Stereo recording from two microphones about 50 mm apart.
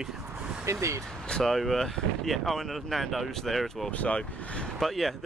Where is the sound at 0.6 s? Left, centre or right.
Right.